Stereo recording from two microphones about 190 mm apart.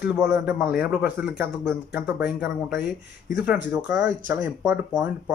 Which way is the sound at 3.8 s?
5° right (ahead or behind).